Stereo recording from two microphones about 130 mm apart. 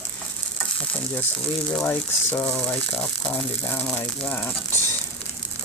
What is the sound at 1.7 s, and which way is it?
Speech, 10° left (ahead or behind).